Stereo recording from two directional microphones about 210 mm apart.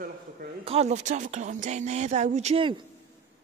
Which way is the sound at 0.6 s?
30° right (ahead or behind).